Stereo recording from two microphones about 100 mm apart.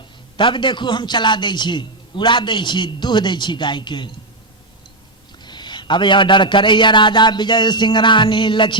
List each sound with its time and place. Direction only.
0.3 s a man's voice: 55° left (ahead or behind)
5.4 s a man's voice: 50° left (ahead or behind)